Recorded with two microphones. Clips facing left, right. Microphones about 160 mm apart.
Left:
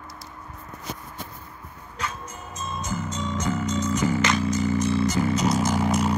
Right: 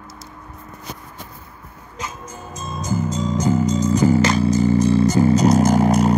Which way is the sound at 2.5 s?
35° right (ahead or behind).